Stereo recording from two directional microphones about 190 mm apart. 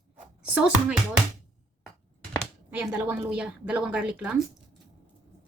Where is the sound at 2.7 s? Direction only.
10° right (ahead or behind).